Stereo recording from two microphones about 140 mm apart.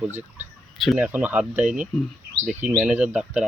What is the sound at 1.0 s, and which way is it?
Speech, 10° right (ahead or behind).